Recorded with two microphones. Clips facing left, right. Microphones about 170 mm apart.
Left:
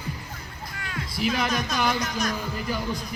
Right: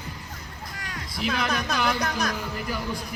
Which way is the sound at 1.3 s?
60° right (ahead or behind).